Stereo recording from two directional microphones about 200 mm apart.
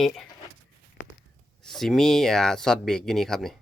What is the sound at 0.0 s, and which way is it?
Speech, centre (ahead or behind).